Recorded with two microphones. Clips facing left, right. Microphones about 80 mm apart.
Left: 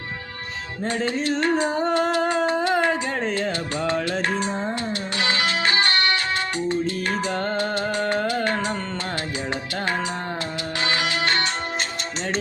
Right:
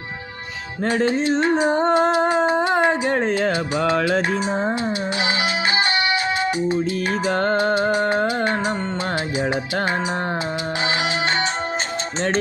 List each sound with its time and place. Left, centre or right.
1.0 s a sound: right
3.1 s speech: right
5.2 s music: centre
7.5 s music: right
10.8 s music: right